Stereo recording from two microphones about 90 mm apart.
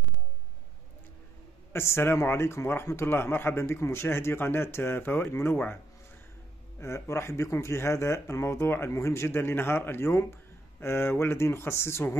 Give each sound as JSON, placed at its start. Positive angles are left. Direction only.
{"t": 1.7, "sound": "a man's voice", "side_deg": 25}
{"t": 6.8, "sound": "a man's voice", "side_deg": 30}